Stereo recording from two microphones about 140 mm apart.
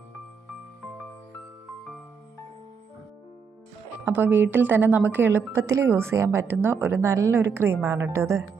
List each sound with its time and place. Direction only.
4.0 s speech: 15° right (ahead or behind)